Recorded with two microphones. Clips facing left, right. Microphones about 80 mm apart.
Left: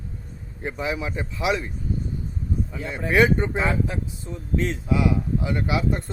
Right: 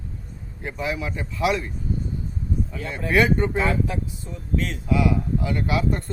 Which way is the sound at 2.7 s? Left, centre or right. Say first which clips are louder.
Even; centre.